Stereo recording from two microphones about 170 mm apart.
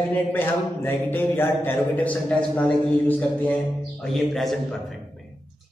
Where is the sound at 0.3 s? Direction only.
10° left (ahead or behind).